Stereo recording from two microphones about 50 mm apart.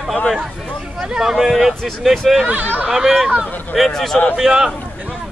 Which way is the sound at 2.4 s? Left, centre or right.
Right.